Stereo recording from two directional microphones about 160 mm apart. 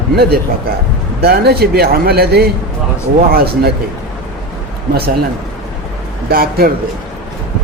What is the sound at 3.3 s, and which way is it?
Speech, 70° right (ahead or behind).